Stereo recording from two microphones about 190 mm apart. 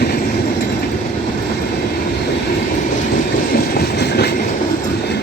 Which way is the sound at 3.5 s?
55° left (ahead or behind).